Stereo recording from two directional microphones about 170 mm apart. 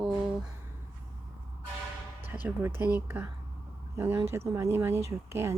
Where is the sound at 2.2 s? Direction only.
10° right (ahead or behind).